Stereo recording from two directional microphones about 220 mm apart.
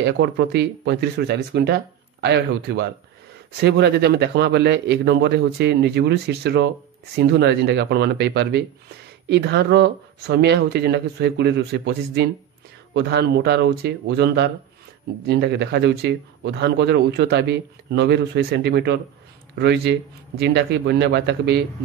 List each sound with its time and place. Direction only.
0.0 s speech: 50° right (ahead or behind)